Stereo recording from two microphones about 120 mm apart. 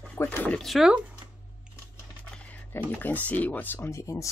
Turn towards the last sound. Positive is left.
turn(degrees=25)  # may be behind; listen again after turning